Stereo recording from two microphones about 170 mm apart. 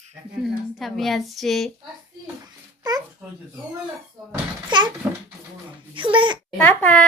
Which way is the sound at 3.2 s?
5° right (ahead or behind).